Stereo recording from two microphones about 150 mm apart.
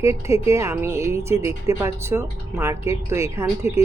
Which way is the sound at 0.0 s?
20° right (ahead or behind).